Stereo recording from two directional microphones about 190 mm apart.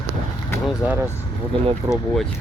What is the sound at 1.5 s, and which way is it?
Speech, 25° right (ahead or behind).